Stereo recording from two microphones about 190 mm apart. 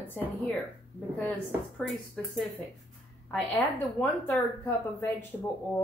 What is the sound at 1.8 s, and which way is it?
A woman's voice, centre (ahead or behind).